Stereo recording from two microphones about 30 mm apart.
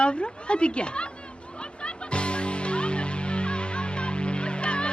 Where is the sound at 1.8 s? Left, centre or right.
Left.